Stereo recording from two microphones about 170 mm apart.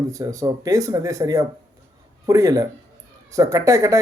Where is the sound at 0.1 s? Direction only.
20° right (ahead or behind).